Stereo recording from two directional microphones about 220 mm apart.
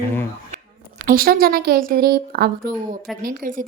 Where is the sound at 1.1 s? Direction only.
40° right (ahead or behind).